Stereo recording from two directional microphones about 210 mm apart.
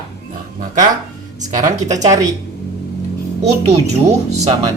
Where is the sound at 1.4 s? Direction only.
35° right (ahead or behind).